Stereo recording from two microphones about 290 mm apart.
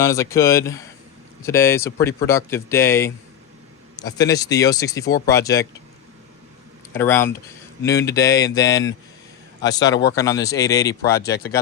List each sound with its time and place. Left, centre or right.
0.0 s speech: centre
6.9 s speech: centre
11.2 s speech: left